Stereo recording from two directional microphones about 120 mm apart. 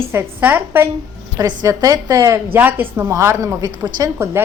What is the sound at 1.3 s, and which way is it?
Speech, 30° right (ahead or behind).